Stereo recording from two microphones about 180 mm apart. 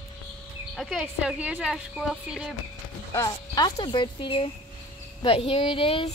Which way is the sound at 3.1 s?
20° left (ahead or behind).